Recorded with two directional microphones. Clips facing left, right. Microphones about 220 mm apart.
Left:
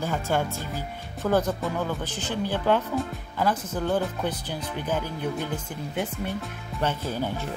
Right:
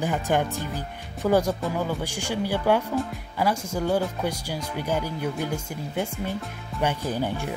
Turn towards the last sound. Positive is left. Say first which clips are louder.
# right 2 dB
turn(degrees=-15)  # may be behind; listen again after turning